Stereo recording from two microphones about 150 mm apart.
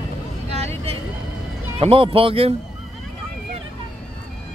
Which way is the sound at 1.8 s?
40° right (ahead or behind).